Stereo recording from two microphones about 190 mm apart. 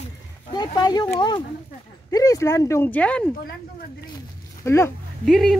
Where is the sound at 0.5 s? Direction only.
20° left (ahead or behind).